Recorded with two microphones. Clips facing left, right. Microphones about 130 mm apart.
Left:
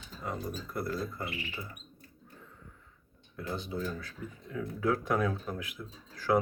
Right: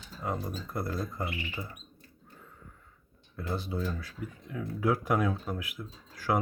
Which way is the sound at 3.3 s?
10° right (ahead or behind).